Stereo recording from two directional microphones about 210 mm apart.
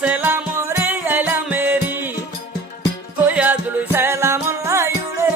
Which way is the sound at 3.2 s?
10° right (ahead or behind).